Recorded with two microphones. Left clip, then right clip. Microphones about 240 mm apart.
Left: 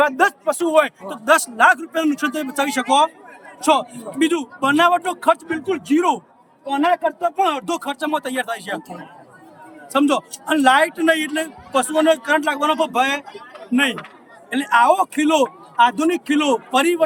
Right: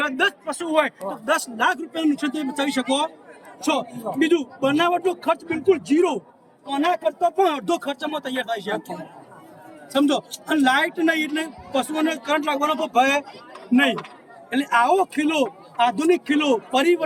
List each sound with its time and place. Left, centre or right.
0.0 s a man's voice: centre
9.9 s a man's voice: centre
14.5 s a man's voice: centre